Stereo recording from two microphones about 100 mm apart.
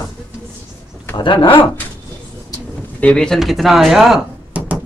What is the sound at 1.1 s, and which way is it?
Speech, 55° left (ahead or behind).